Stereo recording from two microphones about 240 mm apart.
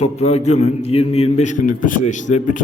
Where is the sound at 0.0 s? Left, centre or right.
Left.